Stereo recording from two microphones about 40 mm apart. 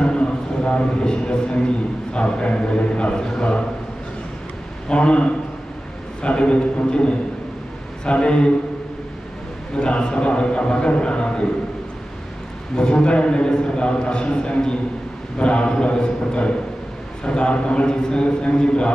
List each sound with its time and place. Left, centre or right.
0.0 s a sound: left
2.1 s a man's voice: left
4.8 s a man's voice: left
9.8 s a man's voice: left
12.7 s a man's voice: left